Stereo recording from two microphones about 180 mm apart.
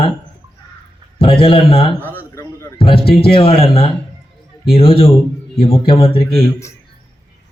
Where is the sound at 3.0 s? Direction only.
60° left (ahead or behind).